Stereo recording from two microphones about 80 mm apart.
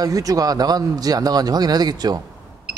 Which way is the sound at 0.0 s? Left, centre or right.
Right.